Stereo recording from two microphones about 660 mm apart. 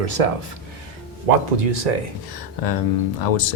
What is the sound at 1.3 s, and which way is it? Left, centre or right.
Speech, right.